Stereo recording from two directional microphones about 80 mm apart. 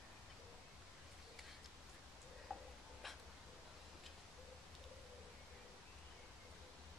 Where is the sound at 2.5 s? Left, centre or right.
Centre.